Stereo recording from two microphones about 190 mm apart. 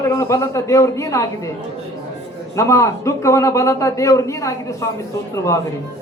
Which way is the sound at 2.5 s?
15° left (ahead or behind).